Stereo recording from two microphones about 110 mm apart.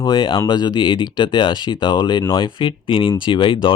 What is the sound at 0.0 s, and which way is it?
Speech, 45° left (ahead or behind).